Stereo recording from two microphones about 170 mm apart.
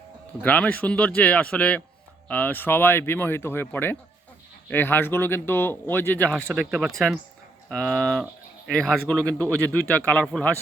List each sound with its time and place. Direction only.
0.4 s speech: 10° left (ahead or behind)